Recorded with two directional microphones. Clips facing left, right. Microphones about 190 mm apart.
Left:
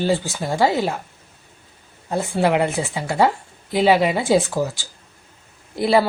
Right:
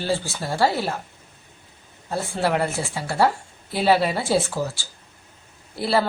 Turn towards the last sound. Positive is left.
turn(degrees=15)  # may be behind; listen again after turning